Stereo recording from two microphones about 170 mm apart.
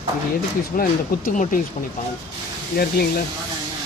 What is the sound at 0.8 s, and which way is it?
Speech, 55° left (ahead or behind).